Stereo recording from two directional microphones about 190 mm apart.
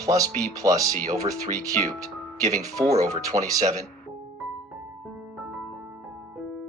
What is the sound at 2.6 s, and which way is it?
Speech, 20° right (ahead or behind).